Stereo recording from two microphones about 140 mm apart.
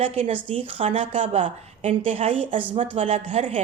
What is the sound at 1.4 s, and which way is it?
A woman's voice, 55° right (ahead or behind).